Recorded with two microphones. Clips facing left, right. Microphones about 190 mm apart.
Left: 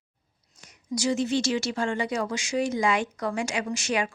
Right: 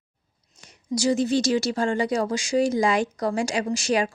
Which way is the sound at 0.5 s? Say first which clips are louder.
Right 4 dB; 30° right (ahead or behind).